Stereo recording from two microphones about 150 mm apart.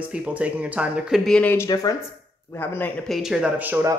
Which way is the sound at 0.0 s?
10° right (ahead or behind).